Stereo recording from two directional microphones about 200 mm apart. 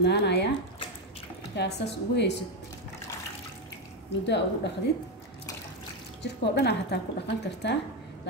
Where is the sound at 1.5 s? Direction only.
55° left (ahead or behind).